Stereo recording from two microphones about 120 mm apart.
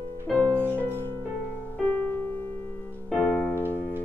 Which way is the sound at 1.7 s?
15° left (ahead or behind).